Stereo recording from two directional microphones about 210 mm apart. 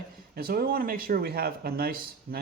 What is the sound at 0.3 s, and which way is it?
Speech, 45° right (ahead or behind).